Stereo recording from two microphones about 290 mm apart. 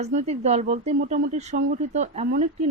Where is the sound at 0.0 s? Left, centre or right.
Right.